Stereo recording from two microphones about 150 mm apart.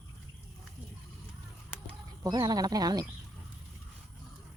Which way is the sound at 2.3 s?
25° right (ahead or behind).